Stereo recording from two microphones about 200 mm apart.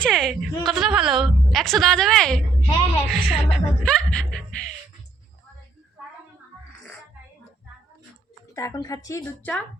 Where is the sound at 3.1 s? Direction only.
Centre (ahead or behind).